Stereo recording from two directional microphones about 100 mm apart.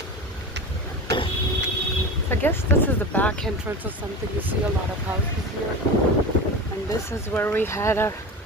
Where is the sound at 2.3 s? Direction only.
20° left (ahead or behind).